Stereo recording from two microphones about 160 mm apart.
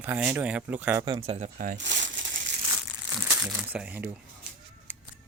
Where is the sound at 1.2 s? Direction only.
45° right (ahead or behind); by 2.3 s 90° right.